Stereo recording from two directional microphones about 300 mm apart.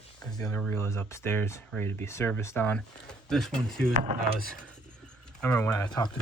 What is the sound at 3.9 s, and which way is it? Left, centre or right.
Speech, right.